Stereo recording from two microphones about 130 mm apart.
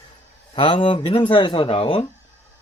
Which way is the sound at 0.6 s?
40° left (ahead or behind).